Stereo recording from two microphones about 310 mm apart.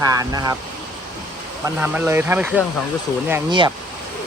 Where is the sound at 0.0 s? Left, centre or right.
Centre.